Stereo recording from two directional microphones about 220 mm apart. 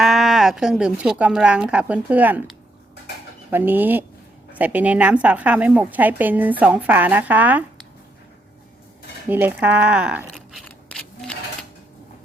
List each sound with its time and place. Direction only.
0.0 s speech: centre (ahead or behind)
3.5 s a woman's voice: 10° right (ahead or behind)
9.3 s a sound: 10° right (ahead or behind)